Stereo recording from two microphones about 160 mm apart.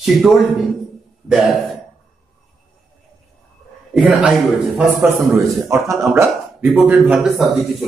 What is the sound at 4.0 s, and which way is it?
Speech, 5° right (ahead or behind).